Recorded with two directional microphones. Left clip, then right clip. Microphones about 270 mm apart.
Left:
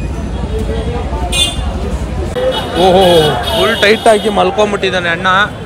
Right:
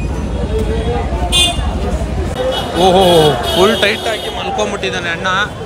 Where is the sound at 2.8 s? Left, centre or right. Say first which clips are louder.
Left 1 dB; centre.